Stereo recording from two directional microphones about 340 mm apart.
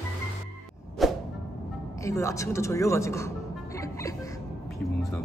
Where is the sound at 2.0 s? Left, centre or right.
Centre.